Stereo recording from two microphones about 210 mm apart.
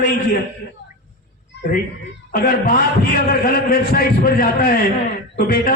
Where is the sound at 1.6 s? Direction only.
45° left (ahead or behind).